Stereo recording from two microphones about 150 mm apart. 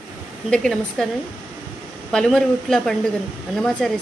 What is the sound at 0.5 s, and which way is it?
Speech, 5° left (ahead or behind).